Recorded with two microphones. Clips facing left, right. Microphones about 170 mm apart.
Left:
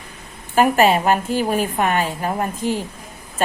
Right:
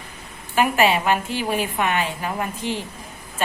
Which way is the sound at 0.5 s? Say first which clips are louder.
Left 4 dB; 40° left (ahead or behind).